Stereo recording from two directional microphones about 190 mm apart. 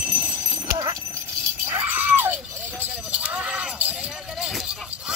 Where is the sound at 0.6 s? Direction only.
20° right (ahead or behind).